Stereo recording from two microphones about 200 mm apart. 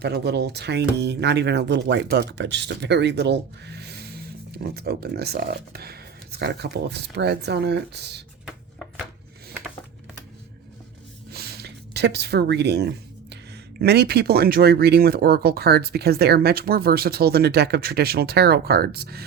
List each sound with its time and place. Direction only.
0.0 s speech: 55° right (ahead or behind)
8.4 s a sound: centre (ahead or behind)
11.3 s speech: 50° right (ahead or behind)